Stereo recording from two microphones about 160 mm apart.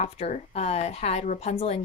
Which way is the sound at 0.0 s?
45° left (ahead or behind).